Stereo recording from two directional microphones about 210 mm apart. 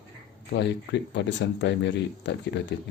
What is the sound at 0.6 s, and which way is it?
Speech, 55° left (ahead or behind).